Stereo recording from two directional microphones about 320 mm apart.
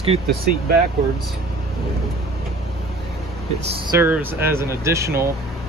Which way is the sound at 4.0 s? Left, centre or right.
Centre.